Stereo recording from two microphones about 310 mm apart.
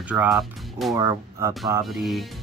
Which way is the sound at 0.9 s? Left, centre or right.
Centre.